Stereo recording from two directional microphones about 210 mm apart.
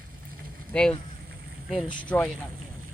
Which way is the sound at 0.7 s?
5° left (ahead or behind).